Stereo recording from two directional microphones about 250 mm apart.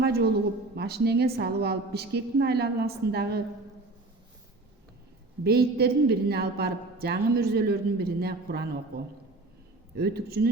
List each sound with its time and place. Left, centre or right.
0.0 s a woman's voice: right
5.4 s a woman's voice: right
9.9 s a woman's voice: right